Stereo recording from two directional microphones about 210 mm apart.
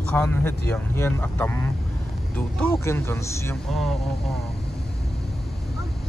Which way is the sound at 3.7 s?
Centre (ahead or behind).